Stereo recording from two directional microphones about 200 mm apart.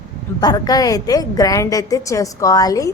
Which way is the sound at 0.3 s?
20° left (ahead or behind).